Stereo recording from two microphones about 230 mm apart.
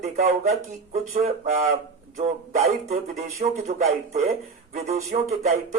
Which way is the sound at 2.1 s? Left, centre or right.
Right.